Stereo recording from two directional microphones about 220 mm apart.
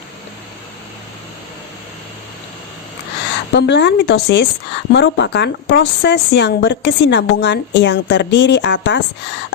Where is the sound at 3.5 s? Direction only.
50° left (ahead or behind).